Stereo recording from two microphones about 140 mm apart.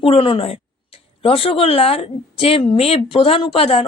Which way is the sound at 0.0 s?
40° left (ahead or behind).